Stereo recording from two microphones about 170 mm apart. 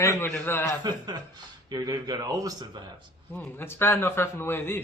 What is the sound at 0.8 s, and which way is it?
Speech, 25° right (ahead or behind).